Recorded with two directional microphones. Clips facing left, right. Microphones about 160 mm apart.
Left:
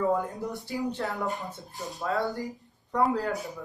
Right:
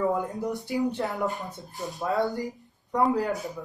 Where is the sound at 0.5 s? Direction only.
20° right (ahead or behind).